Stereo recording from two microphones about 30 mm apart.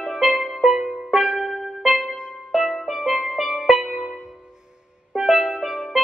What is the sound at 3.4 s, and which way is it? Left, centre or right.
Music, centre.